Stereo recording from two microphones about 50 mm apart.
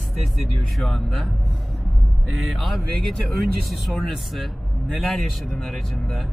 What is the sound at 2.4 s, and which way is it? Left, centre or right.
A man's voice, centre.